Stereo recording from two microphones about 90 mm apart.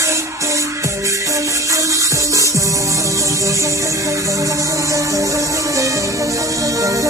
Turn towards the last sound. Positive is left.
turn(degrees=-40)  # may be behind; listen again after turning